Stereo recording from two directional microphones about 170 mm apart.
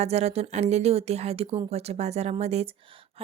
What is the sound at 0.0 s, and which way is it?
A woman's voice, 40° right (ahead or behind).